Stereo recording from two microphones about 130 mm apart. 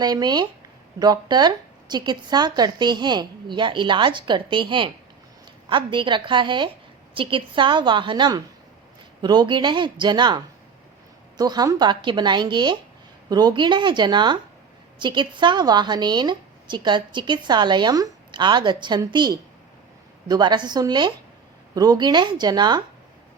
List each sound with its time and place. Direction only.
0.0 s a woman's voice: 30° right (ahead or behind)